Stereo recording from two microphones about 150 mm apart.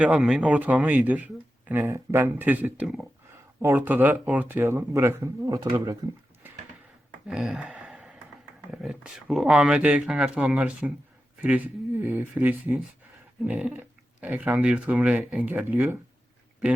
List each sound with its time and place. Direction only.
0.0 s speech: 5° right (ahead or behind)
3.6 s speech: 15° right (ahead or behind)
7.3 s a sound: centre (ahead or behind)
8.7 s speech: 5° right (ahead or behind)